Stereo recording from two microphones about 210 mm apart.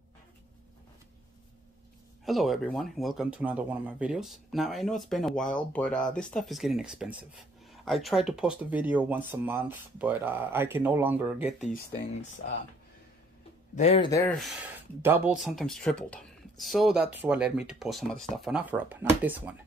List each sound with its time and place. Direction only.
2.2 s speech: centre (ahead or behind)
13.7 s speech: 25° left (ahead or behind)
14.2 s speech: centre (ahead or behind)
15.0 s speech: 10° right (ahead or behind)